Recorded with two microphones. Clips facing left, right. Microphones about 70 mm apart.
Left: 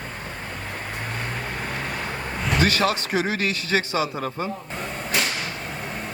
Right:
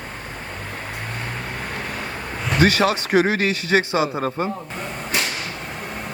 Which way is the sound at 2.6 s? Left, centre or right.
Right.